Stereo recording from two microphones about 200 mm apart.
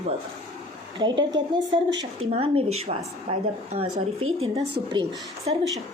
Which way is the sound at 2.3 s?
30° right (ahead or behind).